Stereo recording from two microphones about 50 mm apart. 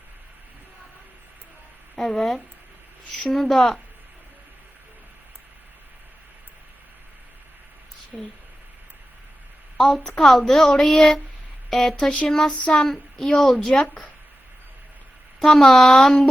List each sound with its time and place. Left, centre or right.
2.0 s a woman's voice: centre
8.1 s speech: centre
10.2 s a woman's voice: centre
11.9 s speech: left
12.3 s a woman's voice: centre
15.4 s a woman's voice: centre